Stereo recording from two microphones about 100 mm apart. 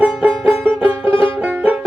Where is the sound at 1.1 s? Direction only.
60° left (ahead or behind).